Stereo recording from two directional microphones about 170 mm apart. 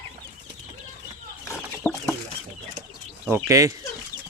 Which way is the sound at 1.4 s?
15° left (ahead or behind).